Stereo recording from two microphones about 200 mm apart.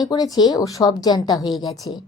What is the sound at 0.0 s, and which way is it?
A woman's voice, 20° left (ahead or behind).